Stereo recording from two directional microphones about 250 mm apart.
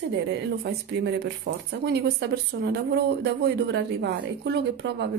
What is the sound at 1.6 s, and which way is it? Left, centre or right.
Speech, right.